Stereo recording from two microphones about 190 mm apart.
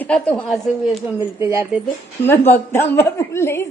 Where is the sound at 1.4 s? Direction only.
15° right (ahead or behind).